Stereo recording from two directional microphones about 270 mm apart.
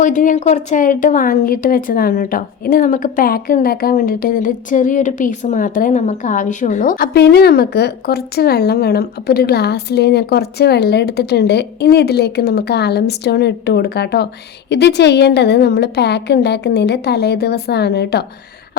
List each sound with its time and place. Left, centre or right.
0.0 s a woman's voice: left